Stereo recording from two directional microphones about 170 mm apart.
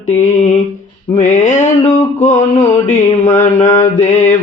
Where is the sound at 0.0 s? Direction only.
45° left (ahead or behind).